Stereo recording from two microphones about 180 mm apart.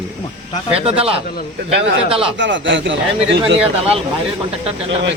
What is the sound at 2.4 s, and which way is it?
Speech, 90° right.